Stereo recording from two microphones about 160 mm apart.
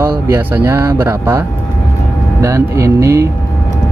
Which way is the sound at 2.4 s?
20° right (ahead or behind).